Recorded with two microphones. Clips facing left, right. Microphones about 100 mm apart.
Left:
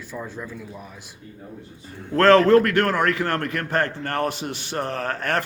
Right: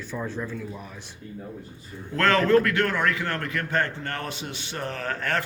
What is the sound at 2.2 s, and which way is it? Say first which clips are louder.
A man's voice: left 6 dB; 35° left (ahead or behind).